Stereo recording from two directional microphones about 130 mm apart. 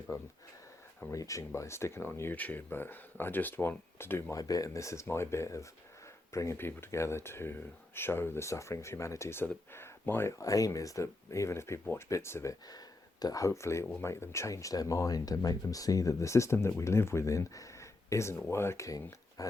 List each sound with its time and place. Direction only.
0.1 s speech: 25° left (ahead or behind)